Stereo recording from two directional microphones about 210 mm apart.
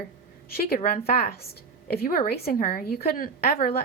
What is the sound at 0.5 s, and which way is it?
Speech, 45° left (ahead or behind).